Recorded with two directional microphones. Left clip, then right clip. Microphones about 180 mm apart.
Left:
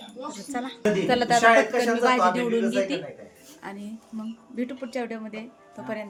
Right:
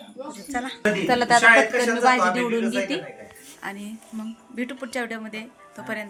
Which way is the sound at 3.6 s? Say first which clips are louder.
Right 4 dB; centre (ahead or behind).